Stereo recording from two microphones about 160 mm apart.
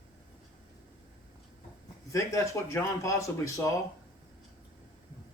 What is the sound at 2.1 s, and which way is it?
Speech, 20° left (ahead or behind).